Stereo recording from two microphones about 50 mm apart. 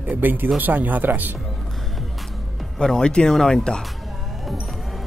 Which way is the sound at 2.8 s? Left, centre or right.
Centre.